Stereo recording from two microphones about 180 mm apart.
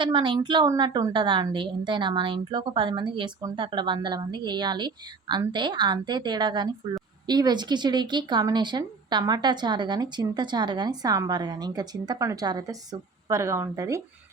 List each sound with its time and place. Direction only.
0.0 s speech: 25° right (ahead or behind)